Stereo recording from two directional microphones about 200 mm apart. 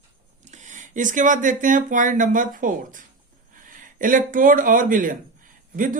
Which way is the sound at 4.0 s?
40° right (ahead or behind).